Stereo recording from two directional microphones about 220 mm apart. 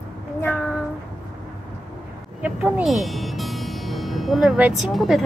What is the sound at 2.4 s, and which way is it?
Speech, 5° right (ahead or behind).